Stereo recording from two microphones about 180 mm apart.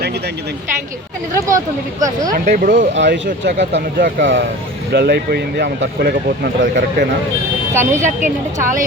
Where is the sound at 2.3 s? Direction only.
45° right (ahead or behind).